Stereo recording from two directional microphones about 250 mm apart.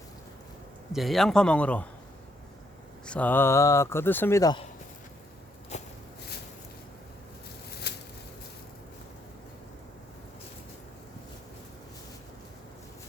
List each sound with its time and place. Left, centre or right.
0.9 s a man's voice: centre
3.1 s speech: centre
5.7 s walk: left
7.9 s a sound: left